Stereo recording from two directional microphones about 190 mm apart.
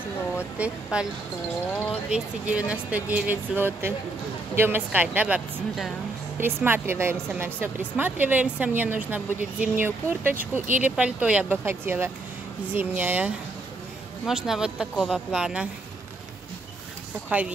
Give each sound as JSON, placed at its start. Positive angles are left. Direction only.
{"t": 0.6, "sound": "a woman's voice", "side_deg": -5}
{"t": 2.0, "sound": "a woman's voice", "side_deg": -5}
{"t": 17.3, "sound": "a woman's voice", "side_deg": -10}